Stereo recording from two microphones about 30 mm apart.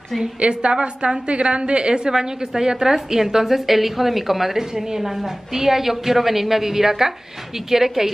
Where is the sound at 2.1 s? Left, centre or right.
Right.